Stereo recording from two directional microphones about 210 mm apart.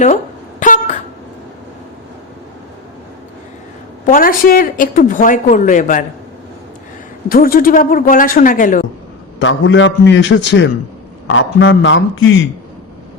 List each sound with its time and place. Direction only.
0.6 s a sound: 35° left (ahead or behind)
4.0 s a woman's voice: 40° left (ahead or behind)
7.3 s a woman's voice: 45° left (ahead or behind)
9.4 s a man's voice: 65° left (ahead or behind)